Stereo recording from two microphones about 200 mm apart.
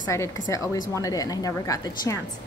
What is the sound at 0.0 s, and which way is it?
A woman's voice, 15° left (ahead or behind).